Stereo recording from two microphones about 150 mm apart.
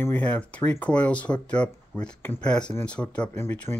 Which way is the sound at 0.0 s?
10° left (ahead or behind).